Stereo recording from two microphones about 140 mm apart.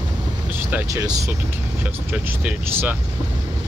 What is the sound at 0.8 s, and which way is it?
Speech, 20° right (ahead or behind).